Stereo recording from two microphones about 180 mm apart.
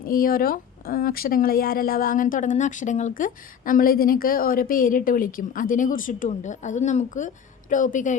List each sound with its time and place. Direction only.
0.0 s speech: 55° left (ahead or behind)